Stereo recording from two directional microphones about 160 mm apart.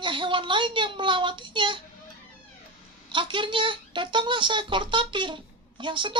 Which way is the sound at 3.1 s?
30° right (ahead or behind).